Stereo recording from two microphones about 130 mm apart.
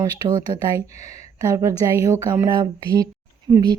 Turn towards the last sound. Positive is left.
turn(degrees=-30)  # may be behind; listen again after turning